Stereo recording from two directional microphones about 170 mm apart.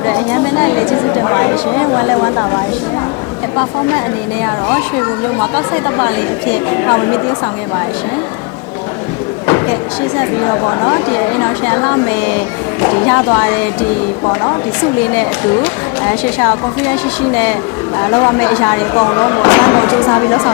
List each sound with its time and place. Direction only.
0.0 s chatter: 20° left (ahead or behind)
4.4 s speech: 20° left (ahead or behind)
10.2 s speech: 20° left (ahead or behind)
15.1 s speech: 15° left (ahead or behind)